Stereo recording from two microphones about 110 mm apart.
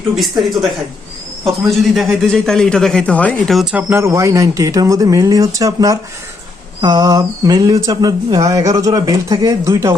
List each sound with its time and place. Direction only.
0.2 s speech: centre (ahead or behind)
3.5 s speech: 5° right (ahead or behind)
3.8 s speech: 15° right (ahead or behind)
4.0 s speech: 25° right (ahead or behind)